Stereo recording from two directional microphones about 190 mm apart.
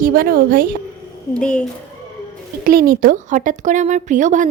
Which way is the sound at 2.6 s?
50° right (ahead or behind).